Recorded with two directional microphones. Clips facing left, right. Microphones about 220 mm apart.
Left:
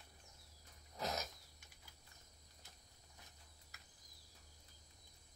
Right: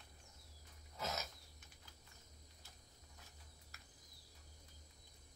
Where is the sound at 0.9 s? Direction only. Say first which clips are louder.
Left 2 dB; 15° left (ahead or behind).